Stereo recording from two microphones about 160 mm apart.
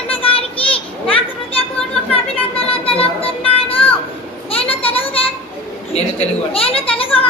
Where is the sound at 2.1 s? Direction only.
35° left (ahead or behind).